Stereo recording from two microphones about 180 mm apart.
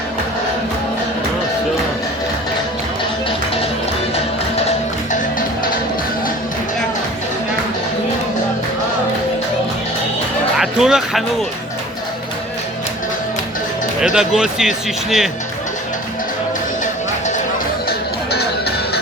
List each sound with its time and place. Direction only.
10.6 s speech: 5° right (ahead or behind)
14.0 s speech: 5° right (ahead or behind)
16.8 s music: 40° left (ahead or behind)
17.8 s music: 60° left (ahead or behind)